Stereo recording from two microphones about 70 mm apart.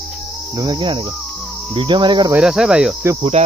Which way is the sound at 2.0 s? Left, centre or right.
Right.